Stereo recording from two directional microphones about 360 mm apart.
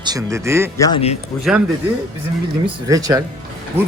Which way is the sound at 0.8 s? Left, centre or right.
Centre.